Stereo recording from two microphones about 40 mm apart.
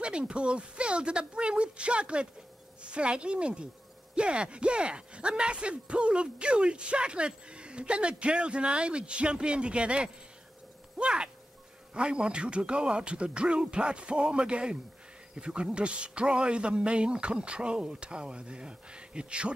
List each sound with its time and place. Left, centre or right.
0.0 s speech: right